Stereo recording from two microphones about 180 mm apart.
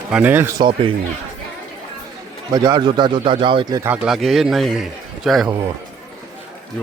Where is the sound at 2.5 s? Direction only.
20° right (ahead or behind).